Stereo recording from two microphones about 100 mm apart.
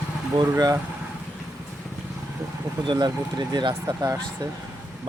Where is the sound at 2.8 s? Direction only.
50° right (ahead or behind).